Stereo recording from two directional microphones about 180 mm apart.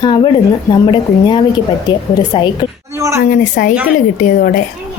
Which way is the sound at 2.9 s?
15° right (ahead or behind).